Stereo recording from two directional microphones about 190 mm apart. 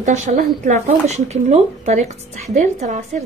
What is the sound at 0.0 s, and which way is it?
Speech, 40° right (ahead or behind).